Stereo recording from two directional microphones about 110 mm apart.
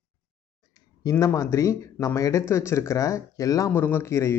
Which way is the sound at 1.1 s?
30° left (ahead or behind).